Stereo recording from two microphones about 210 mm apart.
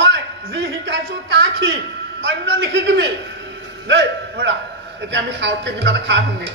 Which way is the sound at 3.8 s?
55° right (ahead or behind).